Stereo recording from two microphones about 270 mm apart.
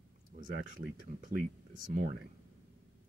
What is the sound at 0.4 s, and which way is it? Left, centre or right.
Speech, right.